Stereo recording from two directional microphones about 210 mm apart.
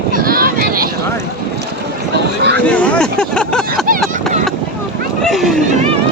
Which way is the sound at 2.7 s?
5° left (ahead or behind).